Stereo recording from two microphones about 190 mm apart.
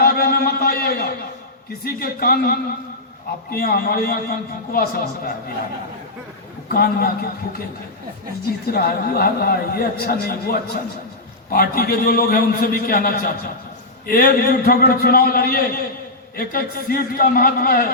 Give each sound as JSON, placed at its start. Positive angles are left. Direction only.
{"t": 0.0, "sound": "a sound", "side_deg": 55}
{"t": 1.8, "sound": "a man's voice", "side_deg": 55}
{"t": 6.7, "sound": "a man's voice", "side_deg": 55}
{"t": 8.6, "sound": "a man's voice", "side_deg": 55}